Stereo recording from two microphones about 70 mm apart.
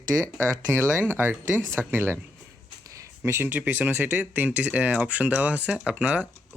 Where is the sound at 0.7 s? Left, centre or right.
Right.